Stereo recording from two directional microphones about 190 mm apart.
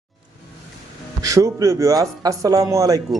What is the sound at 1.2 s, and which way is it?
A man's voice, 20° right (ahead or behind).